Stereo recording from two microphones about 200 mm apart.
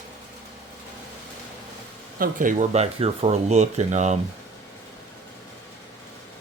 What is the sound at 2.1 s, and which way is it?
Speech, 45° right (ahead or behind).